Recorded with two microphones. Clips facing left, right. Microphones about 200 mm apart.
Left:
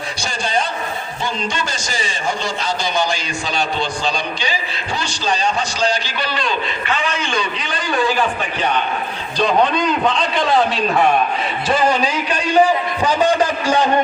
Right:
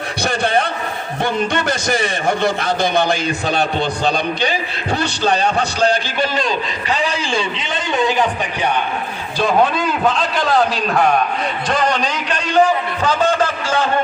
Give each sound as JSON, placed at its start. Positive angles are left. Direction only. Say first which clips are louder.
{"t": 0.2, "sound": "a sound", "louder": "right 5 dB", "side_deg": -60}
{"t": 1.2, "sound": "a man's voice", "louder": "right 6 dB", "side_deg": -60}
{"t": 9.4, "sound": "a man's voice", "louder": "even", "side_deg": -5}